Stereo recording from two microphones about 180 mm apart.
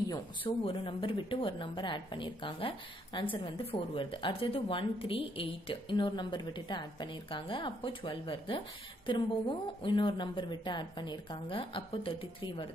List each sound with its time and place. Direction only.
0.1 s speech: 25° left (ahead or behind)